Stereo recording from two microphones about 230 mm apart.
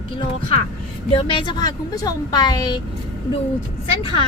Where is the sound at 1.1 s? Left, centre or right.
Left.